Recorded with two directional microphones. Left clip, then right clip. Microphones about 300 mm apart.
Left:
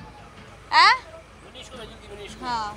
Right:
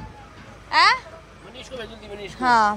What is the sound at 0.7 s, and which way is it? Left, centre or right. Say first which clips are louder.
Babbling: left 1 dB; centre.